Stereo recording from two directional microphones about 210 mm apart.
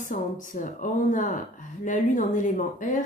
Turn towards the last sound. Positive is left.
turn(degrees=40)  # may be behind; listen again after turning